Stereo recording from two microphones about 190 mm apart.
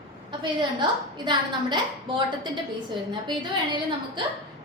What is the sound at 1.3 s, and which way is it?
A woman's voice, 25° right (ahead or behind).